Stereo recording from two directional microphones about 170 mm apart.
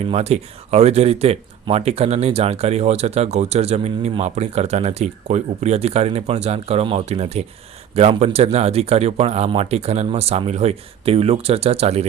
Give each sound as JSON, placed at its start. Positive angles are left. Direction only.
{"t": 0.1, "sound": "speech", "side_deg": -40}